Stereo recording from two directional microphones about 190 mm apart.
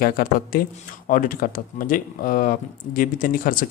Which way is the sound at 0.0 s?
50° left (ahead or behind).